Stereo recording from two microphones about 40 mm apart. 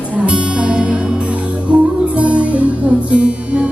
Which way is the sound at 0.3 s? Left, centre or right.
Right.